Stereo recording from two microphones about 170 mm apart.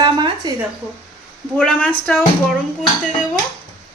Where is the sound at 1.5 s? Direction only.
5° left (ahead or behind).